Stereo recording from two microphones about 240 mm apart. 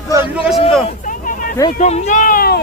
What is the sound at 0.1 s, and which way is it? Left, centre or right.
Speech, centre.